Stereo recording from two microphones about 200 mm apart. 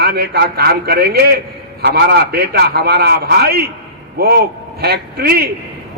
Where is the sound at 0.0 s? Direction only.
50° right (ahead or behind).